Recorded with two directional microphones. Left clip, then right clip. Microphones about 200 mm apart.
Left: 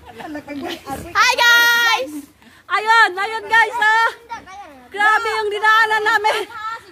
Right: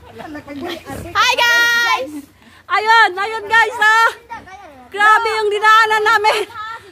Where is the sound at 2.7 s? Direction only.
20° right (ahead or behind).